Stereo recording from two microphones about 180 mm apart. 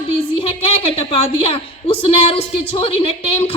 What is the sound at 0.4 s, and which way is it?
A woman's voice, 35° left (ahead or behind).